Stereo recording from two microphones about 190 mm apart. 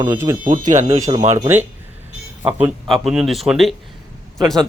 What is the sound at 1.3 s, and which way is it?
Speech, 15° right (ahead or behind).